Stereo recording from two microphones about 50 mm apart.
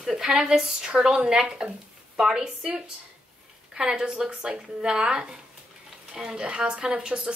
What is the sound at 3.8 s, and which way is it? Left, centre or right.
Speech, centre.